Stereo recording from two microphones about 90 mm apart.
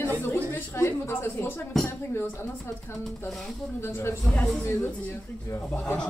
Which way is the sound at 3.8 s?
25° left (ahead or behind).